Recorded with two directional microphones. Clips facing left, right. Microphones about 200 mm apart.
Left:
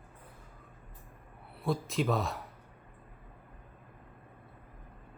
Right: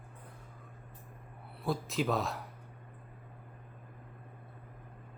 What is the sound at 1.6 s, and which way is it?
Speech, centre (ahead or behind).